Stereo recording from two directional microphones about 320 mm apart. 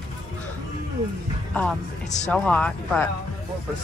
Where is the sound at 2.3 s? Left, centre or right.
Centre.